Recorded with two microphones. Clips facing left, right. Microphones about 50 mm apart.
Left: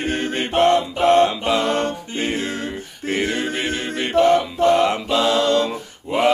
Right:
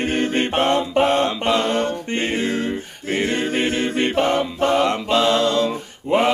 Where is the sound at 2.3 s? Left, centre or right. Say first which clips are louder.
Right 3 dB; right.